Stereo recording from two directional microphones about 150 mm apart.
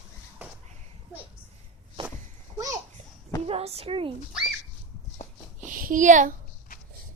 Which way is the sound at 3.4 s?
40° right (ahead or behind).